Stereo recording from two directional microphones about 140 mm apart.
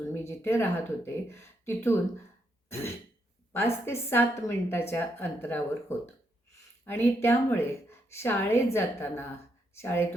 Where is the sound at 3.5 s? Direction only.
15° left (ahead or behind).